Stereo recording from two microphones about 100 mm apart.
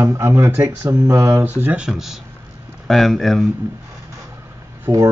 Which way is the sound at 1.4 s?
15° right (ahead or behind).